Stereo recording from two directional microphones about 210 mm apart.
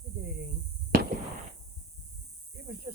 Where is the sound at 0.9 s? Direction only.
45° right (ahead or behind).